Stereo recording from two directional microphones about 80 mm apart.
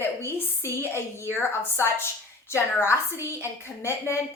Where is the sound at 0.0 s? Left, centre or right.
Left.